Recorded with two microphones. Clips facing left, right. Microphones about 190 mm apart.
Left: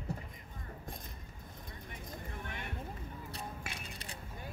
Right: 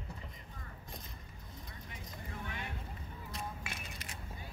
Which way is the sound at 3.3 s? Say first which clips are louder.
Right 3 dB; 35° left (ahead or behind).